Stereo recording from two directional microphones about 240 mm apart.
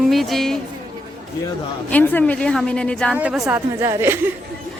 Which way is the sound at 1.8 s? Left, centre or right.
Centre.